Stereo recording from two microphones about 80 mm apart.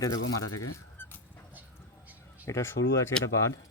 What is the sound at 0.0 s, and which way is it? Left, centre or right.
Speech, left.